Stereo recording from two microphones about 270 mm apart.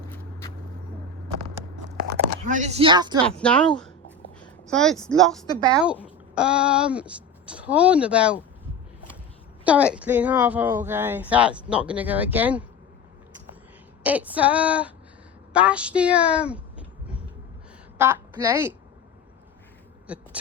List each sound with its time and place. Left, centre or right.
1.7 s a sound: right; by 3.2 s centre
3.2 s speech: centre
4.4 s a sound: centre
5.0 s speech: centre
9.6 s speech: centre
14.0 s speech: centre
17.9 s a woman's voice: centre
20.1 s owl: centre